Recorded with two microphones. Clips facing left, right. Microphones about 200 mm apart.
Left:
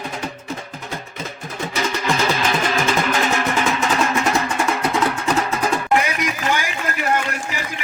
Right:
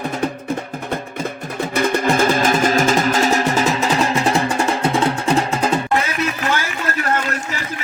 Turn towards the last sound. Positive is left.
turn(degrees=15)  # may be behind; listen again after turning